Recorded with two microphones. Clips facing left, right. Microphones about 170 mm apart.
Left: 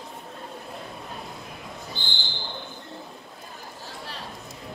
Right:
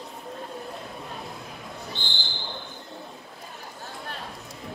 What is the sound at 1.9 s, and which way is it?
Basketball bounce, centre (ahead or behind).